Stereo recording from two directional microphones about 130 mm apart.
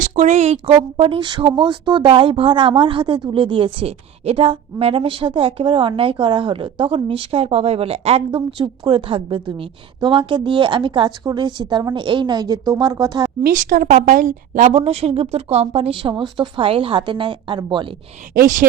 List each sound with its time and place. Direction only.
0.0 s a woman's voice: 65° right (ahead or behind)
0.7 s speech: 40° right (ahead or behind)
8.4 s speech: 40° right (ahead or behind)
13.4 s speech: 90° right
14.8 s speech: 50° right (ahead or behind)
18.3 s speech: 90° right